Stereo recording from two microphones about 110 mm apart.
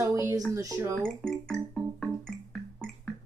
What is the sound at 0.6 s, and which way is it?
Speech, 30° right (ahead or behind).